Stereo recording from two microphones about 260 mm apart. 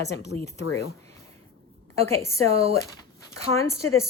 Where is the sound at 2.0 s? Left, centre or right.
Centre.